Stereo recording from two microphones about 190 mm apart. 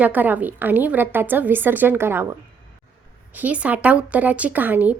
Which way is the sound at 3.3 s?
5° right (ahead or behind).